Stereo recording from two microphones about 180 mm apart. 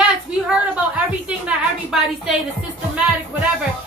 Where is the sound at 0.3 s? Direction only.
5° right (ahead or behind).